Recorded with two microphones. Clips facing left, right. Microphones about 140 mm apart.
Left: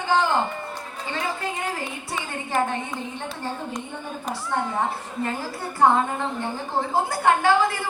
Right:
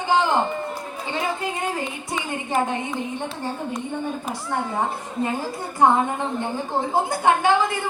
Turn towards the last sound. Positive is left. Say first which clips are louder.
# right 1 dB
turn(degrees=-20)  # may be behind; listen again after turning